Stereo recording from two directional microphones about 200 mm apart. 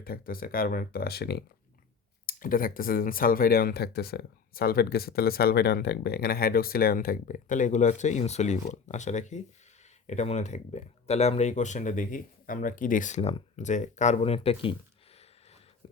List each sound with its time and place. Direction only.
0.0 s speech: 45° left (ahead or behind); by 14.8 s 30° left (ahead or behind)